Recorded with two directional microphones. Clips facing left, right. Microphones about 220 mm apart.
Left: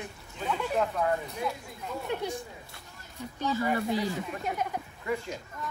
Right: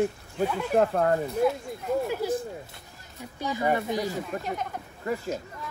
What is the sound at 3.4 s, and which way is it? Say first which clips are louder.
Speech: even; 15° right (ahead or behind).